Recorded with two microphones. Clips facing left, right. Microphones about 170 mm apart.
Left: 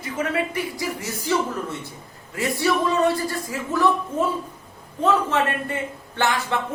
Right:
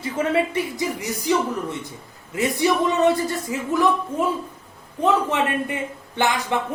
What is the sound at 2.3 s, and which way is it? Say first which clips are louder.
A woman's voice: right 2 dB; 20° right (ahead or behind).